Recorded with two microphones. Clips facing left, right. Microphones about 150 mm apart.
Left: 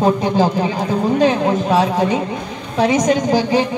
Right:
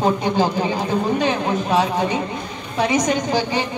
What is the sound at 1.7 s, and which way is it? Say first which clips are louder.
Speech: left 2 dB; 35° left (ahead or behind).